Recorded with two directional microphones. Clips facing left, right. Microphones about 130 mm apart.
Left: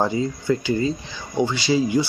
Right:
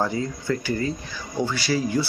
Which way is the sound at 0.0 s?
20° left (ahead or behind).